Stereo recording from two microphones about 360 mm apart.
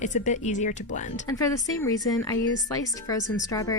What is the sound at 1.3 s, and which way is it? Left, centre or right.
A woman's voice, centre.